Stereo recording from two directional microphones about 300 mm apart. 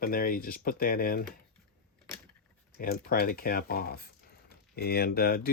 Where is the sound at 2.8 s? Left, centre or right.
Left.